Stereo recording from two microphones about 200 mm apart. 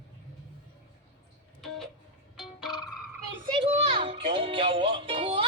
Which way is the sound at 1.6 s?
Centre (ahead or behind).